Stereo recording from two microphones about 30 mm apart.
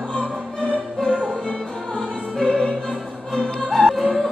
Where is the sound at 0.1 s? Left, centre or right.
Left.